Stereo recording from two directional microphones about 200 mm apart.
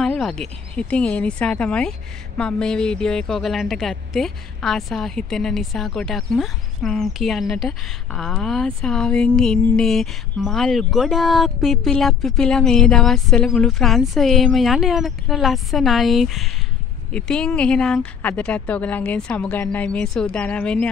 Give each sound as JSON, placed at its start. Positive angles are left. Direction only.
{"t": 0.0, "sound": "speech", "side_deg": 5}